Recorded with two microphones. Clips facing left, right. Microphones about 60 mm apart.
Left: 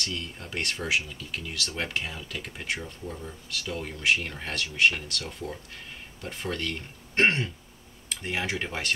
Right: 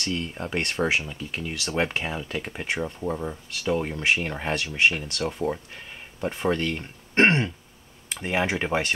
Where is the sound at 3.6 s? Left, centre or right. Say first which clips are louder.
Right 7 dB; right.